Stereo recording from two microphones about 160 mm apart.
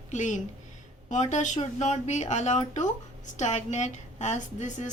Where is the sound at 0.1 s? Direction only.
50° left (ahead or behind).